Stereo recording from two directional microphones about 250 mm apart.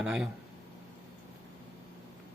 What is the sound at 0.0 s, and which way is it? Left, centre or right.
Speech, centre.